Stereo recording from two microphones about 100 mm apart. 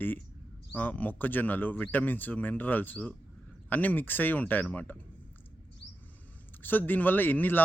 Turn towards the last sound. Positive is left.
turn(degrees=20)  # may be behind; listen again after turning